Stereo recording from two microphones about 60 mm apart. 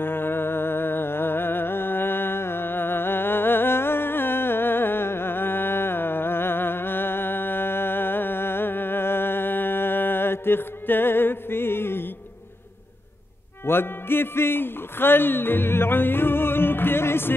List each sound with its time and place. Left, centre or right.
0.0 s music: left
13.7 s speech: left